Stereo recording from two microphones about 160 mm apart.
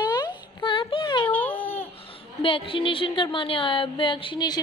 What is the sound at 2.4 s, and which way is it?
A woman's voice, 35° left (ahead or behind).